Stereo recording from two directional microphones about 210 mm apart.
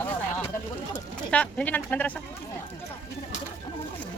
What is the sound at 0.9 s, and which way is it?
Bird, 5° left (ahead or behind).